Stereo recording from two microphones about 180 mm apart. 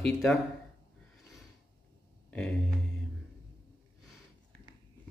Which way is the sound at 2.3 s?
5° left (ahead or behind).